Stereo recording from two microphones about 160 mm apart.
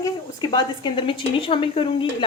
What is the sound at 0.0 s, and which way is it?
A woman's voice, 25° left (ahead or behind).